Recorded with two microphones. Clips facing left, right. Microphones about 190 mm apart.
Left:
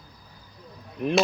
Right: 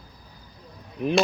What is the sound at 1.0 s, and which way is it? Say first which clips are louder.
Speech: right 1 dB; centre (ahead or behind).